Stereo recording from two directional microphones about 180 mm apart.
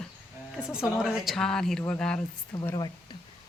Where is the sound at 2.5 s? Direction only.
15° left (ahead or behind).